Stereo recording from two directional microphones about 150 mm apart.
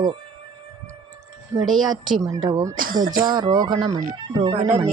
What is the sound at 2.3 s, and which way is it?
Speech, 25° right (ahead or behind).